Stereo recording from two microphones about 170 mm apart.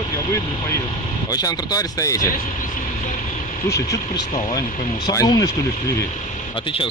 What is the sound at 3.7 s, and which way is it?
Speech, 15° left (ahead or behind).